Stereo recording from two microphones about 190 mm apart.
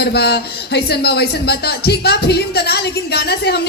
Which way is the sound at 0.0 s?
60° left (ahead or behind).